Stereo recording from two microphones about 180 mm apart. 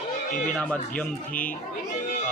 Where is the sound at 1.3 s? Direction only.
50° left (ahead or behind).